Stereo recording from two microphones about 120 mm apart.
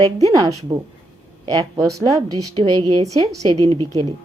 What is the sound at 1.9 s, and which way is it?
A woman's voice, 30° right (ahead or behind).